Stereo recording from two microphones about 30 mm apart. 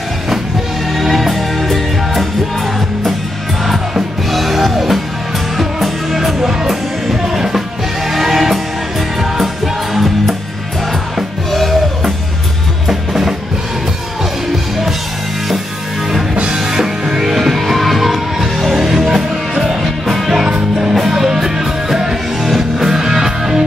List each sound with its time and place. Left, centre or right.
0.9 s music: centre
3.6 s music: centre
16.5 s music: centre
17.3 s music: centre
18.9 s music: centre
20.4 s music: right
20.9 s music: centre